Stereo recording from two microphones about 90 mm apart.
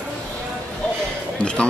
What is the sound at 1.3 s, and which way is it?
Music, 10° left (ahead or behind).